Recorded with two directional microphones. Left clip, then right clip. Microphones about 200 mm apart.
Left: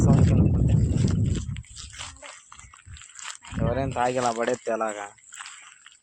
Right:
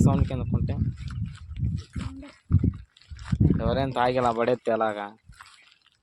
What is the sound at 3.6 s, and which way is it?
Speech, 5° right (ahead or behind).